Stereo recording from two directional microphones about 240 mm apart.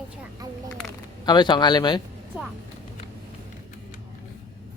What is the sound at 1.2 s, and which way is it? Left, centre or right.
Speech, centre.